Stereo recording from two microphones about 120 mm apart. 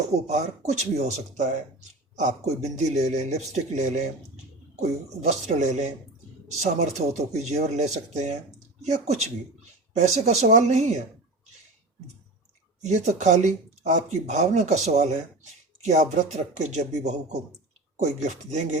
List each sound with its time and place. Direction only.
0.3 s speech: 70° right (ahead or behind)
12.8 s speech: 80° right